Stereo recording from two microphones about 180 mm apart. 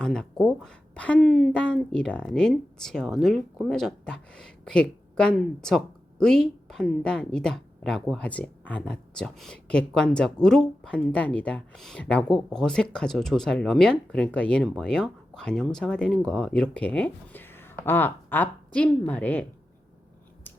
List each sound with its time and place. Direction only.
0.0 s speech: 5° left (ahead or behind)